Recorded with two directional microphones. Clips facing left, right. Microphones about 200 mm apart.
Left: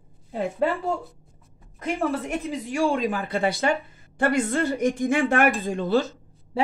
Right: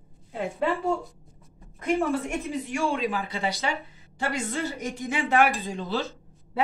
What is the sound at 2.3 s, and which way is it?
Speech, 35° left (ahead or behind).